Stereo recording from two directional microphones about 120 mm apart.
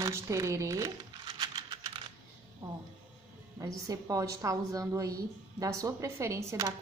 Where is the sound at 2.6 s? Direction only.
25° right (ahead or behind).